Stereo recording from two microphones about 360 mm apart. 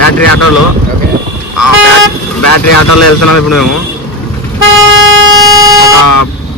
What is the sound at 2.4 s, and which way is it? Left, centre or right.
Speech, left.